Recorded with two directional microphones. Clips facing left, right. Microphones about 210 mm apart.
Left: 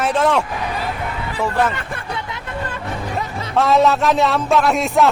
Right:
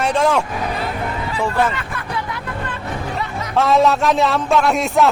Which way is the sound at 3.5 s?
Centre (ahead or behind).